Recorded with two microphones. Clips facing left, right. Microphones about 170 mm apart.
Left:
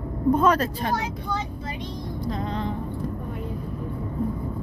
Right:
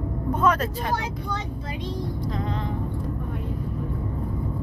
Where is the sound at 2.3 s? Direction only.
30° left (ahead or behind).